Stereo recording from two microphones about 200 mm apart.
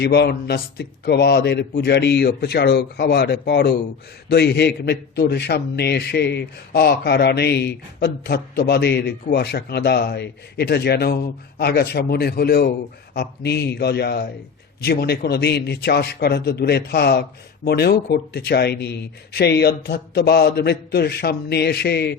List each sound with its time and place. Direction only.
0.0 s a man's voice: 55° left (ahead or behind)